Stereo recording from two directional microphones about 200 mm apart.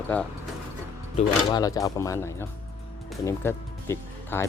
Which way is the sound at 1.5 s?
20° left (ahead or behind).